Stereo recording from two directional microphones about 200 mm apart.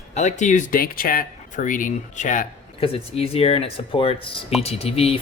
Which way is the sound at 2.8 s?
30° left (ahead or behind).